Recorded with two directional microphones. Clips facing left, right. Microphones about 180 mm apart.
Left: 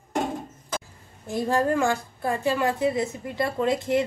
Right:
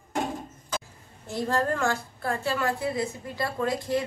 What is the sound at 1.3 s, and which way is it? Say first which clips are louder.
A woman's voice: left 3 dB; 15° left (ahead or behind).